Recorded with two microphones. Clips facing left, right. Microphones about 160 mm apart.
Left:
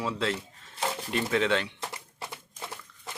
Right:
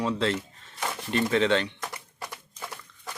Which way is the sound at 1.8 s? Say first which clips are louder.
Right 1 dB; 25° left (ahead or behind).